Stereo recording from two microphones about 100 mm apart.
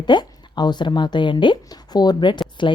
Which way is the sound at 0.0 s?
50° left (ahead or behind).